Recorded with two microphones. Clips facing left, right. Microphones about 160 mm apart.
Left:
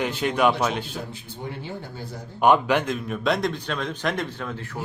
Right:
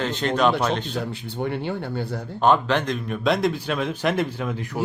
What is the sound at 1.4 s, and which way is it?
Speech, 70° right (ahead or behind).